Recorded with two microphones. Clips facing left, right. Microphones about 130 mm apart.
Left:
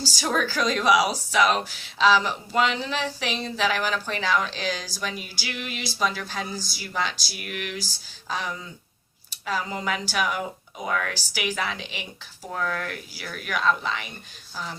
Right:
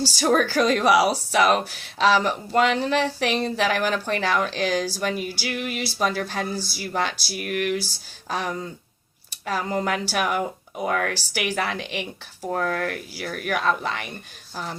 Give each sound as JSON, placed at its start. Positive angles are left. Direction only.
{"t": 0.2, "sound": "speech", "side_deg": -55}
{"t": 0.9, "sound": "speech", "side_deg": -40}
{"t": 12.5, "sound": "speech", "side_deg": -45}